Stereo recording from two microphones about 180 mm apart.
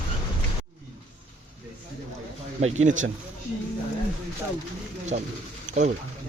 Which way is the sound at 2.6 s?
40° right (ahead or behind).